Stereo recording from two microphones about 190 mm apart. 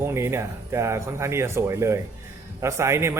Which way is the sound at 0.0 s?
15° right (ahead or behind).